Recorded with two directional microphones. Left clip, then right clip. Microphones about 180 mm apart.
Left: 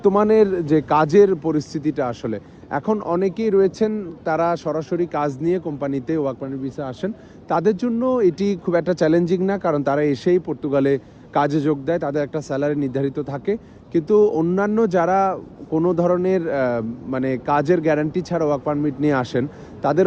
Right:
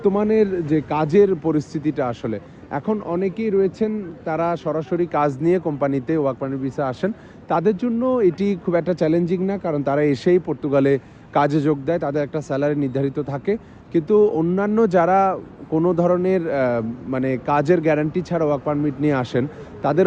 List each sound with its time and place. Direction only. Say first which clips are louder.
0.0 s a man's voice: left 3 dB; centre (ahead or behind); by 7.1 s 25° right (ahead or behind)
7.4 s a man's voice: even; 5° right (ahead or behind)